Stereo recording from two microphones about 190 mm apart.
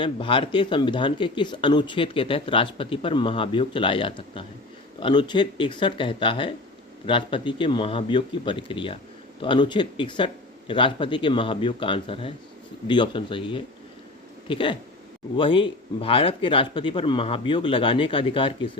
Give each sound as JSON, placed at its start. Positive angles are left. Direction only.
{"t": 0.0, "sound": "speech", "side_deg": 25}